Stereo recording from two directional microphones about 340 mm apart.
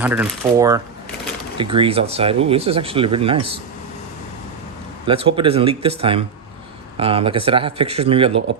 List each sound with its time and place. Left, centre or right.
0.0 s speech: centre
5.0 s speech: centre